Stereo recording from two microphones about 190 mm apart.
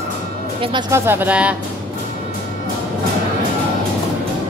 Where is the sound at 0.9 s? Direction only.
10° right (ahead or behind).